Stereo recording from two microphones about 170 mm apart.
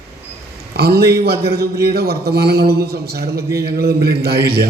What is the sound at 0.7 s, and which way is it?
A man's voice, 65° right (ahead or behind).